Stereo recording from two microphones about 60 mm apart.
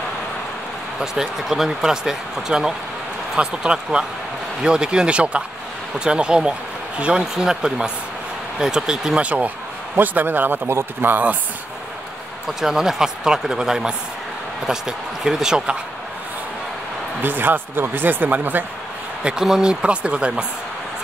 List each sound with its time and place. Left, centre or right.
0.9 s speech: centre
9.9 s speech: right
12.4 s speech: centre
17.2 s speech: right
19.2 s speech: centre